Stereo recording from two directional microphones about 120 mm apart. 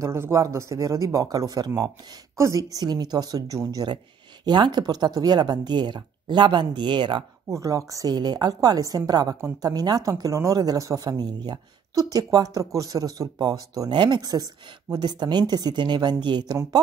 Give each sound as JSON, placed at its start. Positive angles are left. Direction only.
{"t": 0.0, "sound": "a woman's voice", "side_deg": -25}
{"t": 7.4, "sound": "a woman's voice", "side_deg": -25}